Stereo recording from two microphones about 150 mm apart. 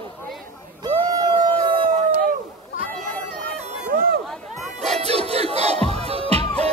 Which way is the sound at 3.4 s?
75° right (ahead or behind).